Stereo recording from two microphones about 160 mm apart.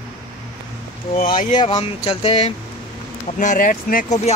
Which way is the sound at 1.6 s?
30° left (ahead or behind).